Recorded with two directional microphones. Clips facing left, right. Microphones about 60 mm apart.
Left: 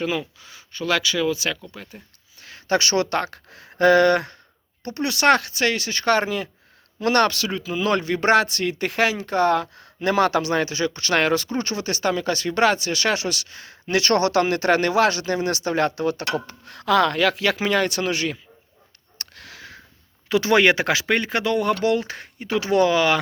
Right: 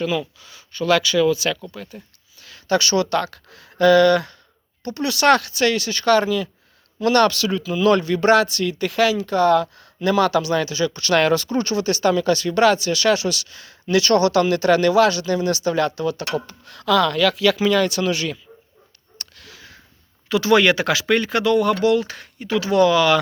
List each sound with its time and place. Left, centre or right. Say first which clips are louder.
0.0 s speech: right 2 dB; left
2.4 s speech: right 2 dB; left
16.5 s speech: right 1 dB; left
19.2 s sniff: left 2 dB; left
20.2 s speech: right 1 dB; left